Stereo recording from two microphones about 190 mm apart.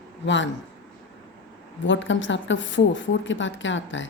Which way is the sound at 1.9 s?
75° left (ahead or behind).